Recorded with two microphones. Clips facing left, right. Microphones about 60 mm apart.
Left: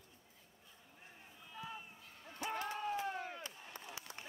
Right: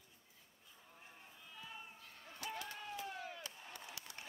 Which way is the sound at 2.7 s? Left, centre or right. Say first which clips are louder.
Left 7 dB; left.